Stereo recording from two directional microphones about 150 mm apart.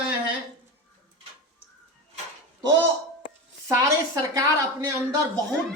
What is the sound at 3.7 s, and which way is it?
A woman's voice, 20° right (ahead or behind).